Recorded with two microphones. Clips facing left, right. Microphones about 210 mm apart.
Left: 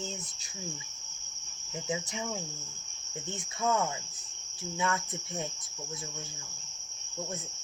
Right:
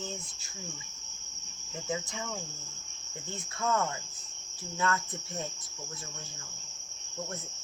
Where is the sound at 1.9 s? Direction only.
15° left (ahead or behind).